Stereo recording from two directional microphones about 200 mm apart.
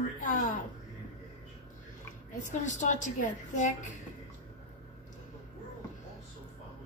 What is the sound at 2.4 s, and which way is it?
A woman's voice, 35° left (ahead or behind).